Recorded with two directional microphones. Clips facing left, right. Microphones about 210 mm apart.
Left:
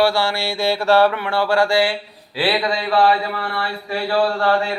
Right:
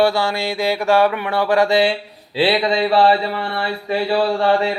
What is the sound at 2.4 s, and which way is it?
Speech, 25° right (ahead or behind).